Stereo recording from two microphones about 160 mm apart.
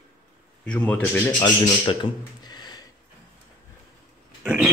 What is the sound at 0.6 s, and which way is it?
Speech, 10° left (ahead or behind).